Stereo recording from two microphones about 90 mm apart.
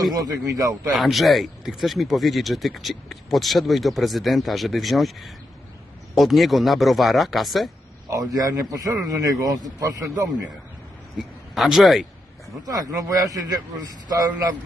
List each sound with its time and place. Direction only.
0.0 s speech: 45° right (ahead or behind)
0.9 s speech: centre (ahead or behind)
8.1 s a man's voice: 40° right (ahead or behind)
11.5 s speech: centre (ahead or behind)
12.6 s a man's voice: 45° right (ahead or behind)